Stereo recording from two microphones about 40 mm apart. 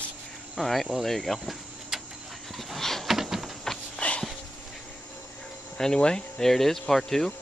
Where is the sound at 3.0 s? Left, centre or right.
Centre.